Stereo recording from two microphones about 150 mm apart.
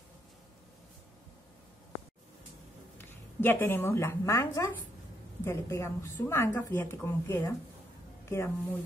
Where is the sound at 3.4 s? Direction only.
15° left (ahead or behind).